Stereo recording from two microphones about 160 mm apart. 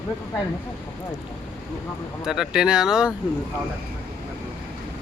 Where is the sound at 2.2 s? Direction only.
5° right (ahead or behind).